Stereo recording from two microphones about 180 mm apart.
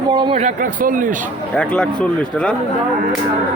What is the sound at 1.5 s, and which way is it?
Speech, 5° left (ahead or behind).